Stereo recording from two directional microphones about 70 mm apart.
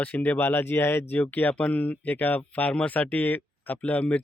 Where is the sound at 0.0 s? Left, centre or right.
Left.